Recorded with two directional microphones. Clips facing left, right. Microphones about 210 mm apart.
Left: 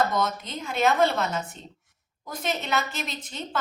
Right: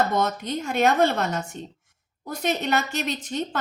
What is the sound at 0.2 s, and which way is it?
A woman's voice, 50° right (ahead or behind).